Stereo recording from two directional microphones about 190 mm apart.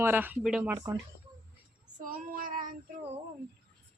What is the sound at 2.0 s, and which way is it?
Child singing, 45° right (ahead or behind).